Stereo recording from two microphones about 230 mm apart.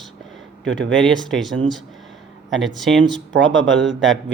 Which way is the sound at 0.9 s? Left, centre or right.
Centre.